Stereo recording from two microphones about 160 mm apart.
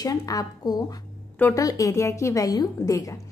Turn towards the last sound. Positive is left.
turn(degrees=20)  # may be behind; listen again after turning